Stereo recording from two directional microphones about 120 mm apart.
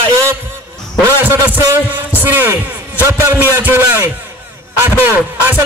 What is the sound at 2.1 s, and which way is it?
A man's voice, 20° right (ahead or behind).